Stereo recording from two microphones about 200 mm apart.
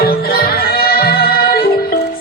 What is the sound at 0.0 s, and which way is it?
Music, 50° left (ahead or behind).